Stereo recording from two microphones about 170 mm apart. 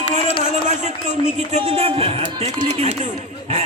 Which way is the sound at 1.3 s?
40° right (ahead or behind).